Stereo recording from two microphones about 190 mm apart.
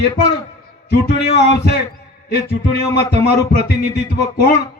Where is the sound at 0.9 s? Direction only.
60° left (ahead or behind).